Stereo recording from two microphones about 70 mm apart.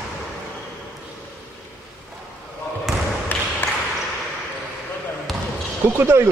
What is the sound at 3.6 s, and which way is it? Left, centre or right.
Ping, left.